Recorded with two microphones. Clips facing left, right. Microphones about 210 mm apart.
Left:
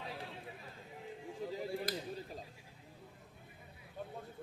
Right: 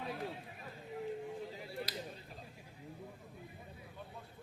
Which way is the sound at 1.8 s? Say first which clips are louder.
Left 4 dB; 50° left (ahead or behind).